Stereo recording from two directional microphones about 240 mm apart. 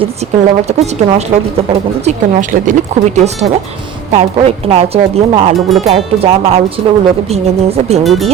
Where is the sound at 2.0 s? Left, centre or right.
Right.